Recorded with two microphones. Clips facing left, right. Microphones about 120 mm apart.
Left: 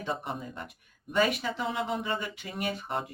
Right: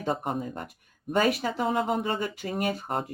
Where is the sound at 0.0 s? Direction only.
45° right (ahead or behind).